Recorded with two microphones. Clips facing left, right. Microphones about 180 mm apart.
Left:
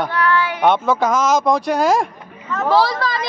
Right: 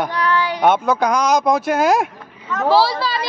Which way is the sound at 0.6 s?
Centre (ahead or behind).